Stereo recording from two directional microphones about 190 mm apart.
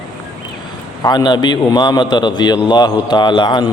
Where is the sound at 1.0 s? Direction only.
20° left (ahead or behind).